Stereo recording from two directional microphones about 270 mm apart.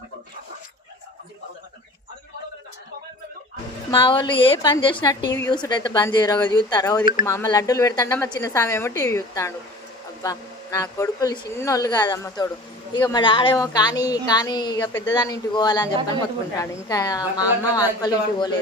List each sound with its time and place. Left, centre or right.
3.9 s a woman's voice: centre